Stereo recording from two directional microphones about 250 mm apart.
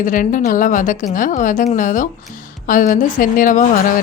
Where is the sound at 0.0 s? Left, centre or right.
Left.